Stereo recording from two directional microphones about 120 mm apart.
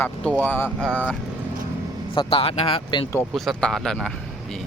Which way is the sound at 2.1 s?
50° left (ahead or behind).